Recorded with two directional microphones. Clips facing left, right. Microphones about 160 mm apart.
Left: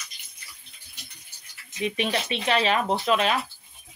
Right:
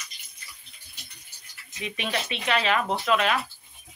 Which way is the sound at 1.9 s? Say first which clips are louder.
Left 1 dB; 30° left (ahead or behind).